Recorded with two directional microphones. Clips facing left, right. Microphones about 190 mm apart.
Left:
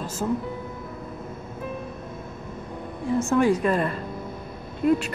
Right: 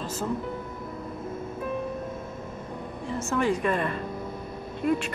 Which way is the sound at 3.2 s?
55° left (ahead or behind).